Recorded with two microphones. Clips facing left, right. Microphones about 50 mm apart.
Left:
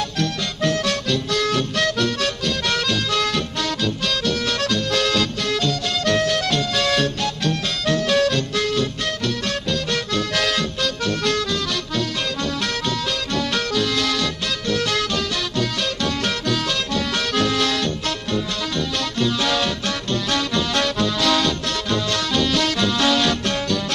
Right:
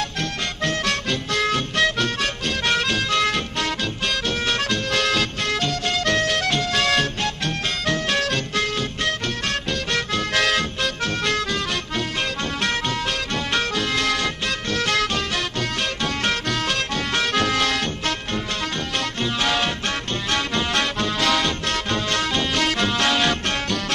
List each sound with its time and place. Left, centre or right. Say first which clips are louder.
0.2 s music: left 6 dB; right
6.8 s music: left 1 dB; right